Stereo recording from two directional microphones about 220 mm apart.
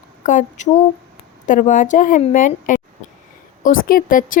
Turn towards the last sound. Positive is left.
turn(degrees=40)  # may be behind; listen again after turning